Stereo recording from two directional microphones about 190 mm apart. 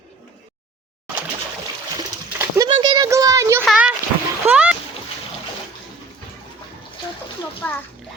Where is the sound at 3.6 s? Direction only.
5° right (ahead or behind).